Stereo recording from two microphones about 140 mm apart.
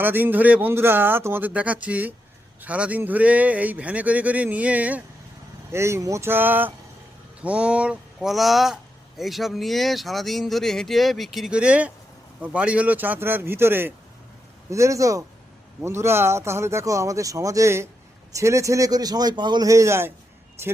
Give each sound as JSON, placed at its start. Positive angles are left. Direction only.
{"t": 0.0, "sound": "speech", "side_deg": -15}